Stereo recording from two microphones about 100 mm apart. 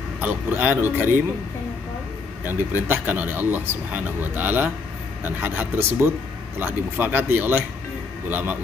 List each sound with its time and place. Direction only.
0.2 s speech: 15° right (ahead or behind)
2.9 s speech: 20° right (ahead or behind)